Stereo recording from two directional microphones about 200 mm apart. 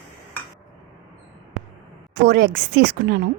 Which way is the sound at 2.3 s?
55° right (ahead or behind).